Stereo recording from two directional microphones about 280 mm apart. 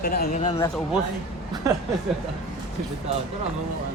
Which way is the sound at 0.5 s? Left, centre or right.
Centre.